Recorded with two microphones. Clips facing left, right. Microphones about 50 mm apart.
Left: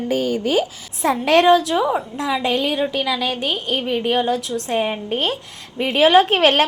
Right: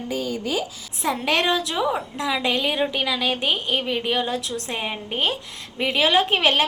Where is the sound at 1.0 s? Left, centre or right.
Centre.